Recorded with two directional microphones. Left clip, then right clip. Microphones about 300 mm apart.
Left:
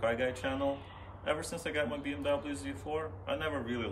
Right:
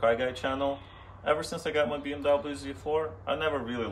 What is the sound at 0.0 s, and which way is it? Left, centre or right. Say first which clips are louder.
Speech: right 6 dB; centre.